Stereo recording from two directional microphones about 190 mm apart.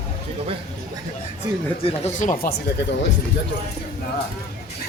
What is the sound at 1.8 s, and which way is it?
Speech, 35° left (ahead or behind).